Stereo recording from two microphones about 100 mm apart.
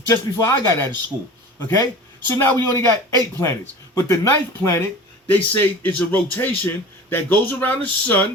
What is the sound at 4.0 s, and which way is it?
Speech, 25° left (ahead or behind).